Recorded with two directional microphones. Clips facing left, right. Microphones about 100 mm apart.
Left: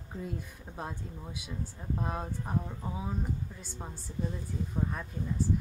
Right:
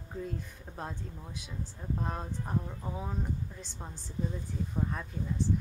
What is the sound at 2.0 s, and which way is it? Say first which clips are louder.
Speech: left 2 dB; 5° left (ahead or behind).